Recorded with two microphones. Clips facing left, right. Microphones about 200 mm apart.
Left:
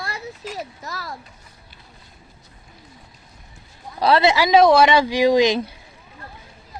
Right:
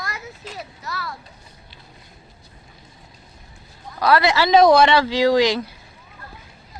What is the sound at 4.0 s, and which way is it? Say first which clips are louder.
Speech: left 1 dB; 25° left (ahead or behind).